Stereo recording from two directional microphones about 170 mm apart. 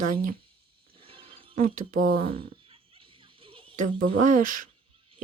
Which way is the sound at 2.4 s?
30° right (ahead or behind).